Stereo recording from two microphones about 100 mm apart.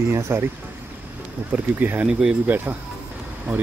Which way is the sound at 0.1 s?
25° right (ahead or behind).